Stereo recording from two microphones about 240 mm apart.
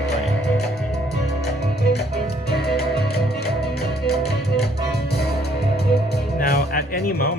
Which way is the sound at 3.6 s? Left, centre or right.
Centre.